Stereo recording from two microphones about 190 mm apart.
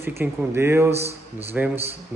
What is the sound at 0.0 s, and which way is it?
A man's voice, 10° right (ahead or behind).